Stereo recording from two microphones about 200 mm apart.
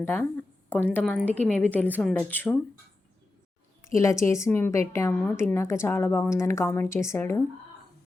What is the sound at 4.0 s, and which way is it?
Speech, 15° left (ahead or behind).